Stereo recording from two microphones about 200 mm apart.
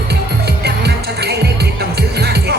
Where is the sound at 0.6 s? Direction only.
55° right (ahead or behind).